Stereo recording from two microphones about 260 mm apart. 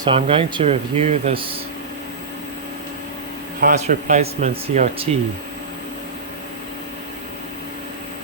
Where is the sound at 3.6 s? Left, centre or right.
Right.